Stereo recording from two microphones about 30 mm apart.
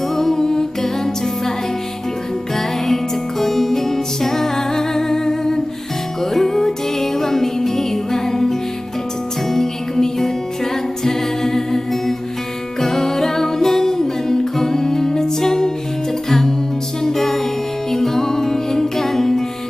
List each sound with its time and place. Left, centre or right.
0.2 s music: centre
2.6 s music: centre
17.0 s music: centre